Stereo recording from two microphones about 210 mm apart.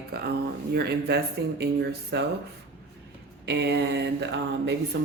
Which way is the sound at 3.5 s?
55° right (ahead or behind).